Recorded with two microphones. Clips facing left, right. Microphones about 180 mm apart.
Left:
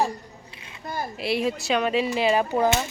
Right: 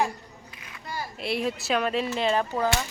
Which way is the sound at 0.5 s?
30° left (ahead or behind).